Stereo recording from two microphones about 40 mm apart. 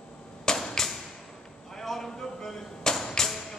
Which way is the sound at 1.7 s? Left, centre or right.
Centre.